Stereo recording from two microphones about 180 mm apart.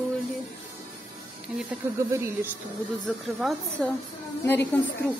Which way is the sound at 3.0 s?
5° left (ahead or behind).